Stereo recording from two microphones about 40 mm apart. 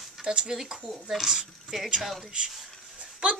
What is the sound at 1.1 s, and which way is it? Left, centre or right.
Speech, centre.